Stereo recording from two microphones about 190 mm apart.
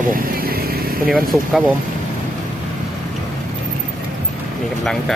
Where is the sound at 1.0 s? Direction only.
5° right (ahead or behind).